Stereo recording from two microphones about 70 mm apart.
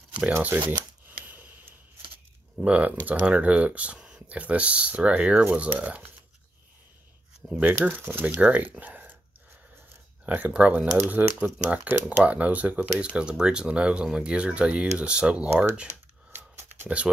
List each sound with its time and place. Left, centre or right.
0.4 s speech: right
1.0 s scissors: right
2.6 s speech: right
7.5 s speech: right
10.2 s speech: right
16.3 s a sound: right